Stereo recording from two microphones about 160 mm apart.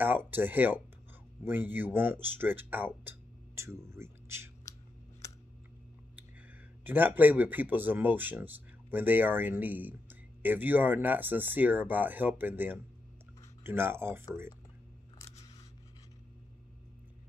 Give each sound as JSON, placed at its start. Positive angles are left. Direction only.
{"t": 0.0, "sound": "speech", "side_deg": -10}
{"t": 4.7, "sound": "scissors", "side_deg": 20}
{"t": 6.8, "sound": "speech", "side_deg": -10}